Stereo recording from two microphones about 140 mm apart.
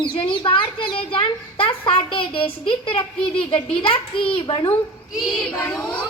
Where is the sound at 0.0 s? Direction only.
40° left (ahead or behind).